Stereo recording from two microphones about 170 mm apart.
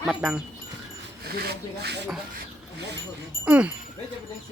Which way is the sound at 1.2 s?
70° right (ahead or behind).